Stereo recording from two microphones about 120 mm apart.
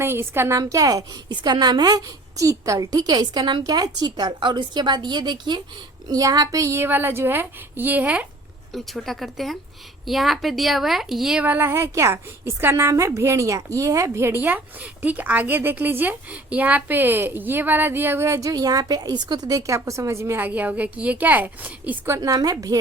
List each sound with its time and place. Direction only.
0.0 s a woman's voice: 20° right (ahead or behind)
8.7 s a woman's voice: centre (ahead or behind); by 22.8 s 30° right (ahead or behind)